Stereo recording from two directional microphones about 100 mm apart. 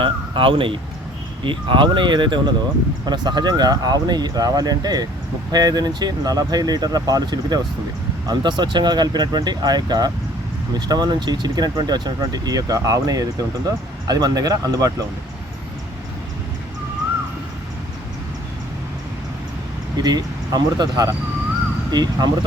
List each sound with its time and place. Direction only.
0.0 s a sound: 60° right (ahead or behind)
1.5 s speech: 55° right (ahead or behind); by 15.0 s 35° right (ahead or behind)
20.0 s speech: 40° right (ahead or behind)